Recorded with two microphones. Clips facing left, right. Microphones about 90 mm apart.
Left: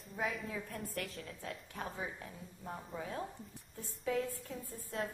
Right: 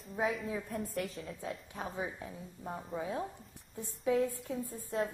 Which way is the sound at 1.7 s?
15° right (ahead or behind).